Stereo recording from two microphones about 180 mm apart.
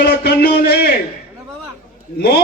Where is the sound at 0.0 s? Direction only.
65° left (ahead or behind).